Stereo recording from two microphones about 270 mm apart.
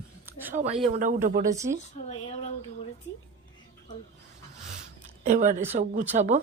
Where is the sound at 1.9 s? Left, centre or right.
Left.